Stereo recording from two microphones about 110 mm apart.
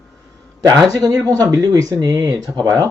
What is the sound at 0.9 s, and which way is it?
Speech, 30° right (ahead or behind).